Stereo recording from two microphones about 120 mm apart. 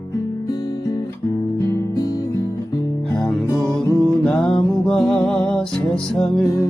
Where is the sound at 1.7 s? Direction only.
25° left (ahead or behind).